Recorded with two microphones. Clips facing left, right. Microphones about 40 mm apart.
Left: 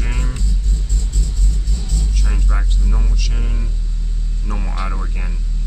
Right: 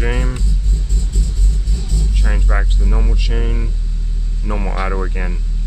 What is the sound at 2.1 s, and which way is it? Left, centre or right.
Speech, right.